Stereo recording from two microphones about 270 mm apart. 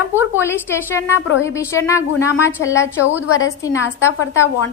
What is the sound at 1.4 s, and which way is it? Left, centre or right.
A woman's voice, centre.